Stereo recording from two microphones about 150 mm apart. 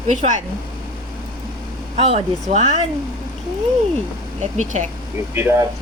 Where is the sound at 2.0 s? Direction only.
45° right (ahead or behind).